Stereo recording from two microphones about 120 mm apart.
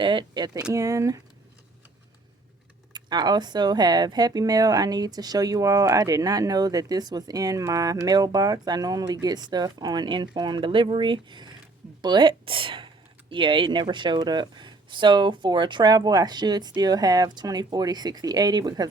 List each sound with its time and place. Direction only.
0.0 s speech: 40° right (ahead or behind)
2.9 s speech: 35° right (ahead or behind)